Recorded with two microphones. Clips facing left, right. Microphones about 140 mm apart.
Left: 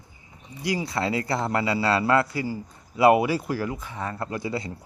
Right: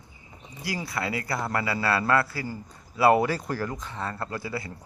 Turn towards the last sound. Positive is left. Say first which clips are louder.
# left 3 dB
turn(degrees=20)  # may be behind; listen again after turning